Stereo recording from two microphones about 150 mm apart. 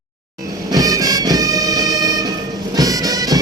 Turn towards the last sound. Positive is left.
turn(degrees=-25)  # may be behind; listen again after turning